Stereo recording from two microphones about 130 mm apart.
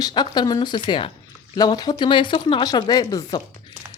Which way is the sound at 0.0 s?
35° left (ahead or behind).